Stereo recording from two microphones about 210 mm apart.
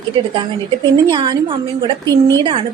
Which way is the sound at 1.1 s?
25° right (ahead or behind).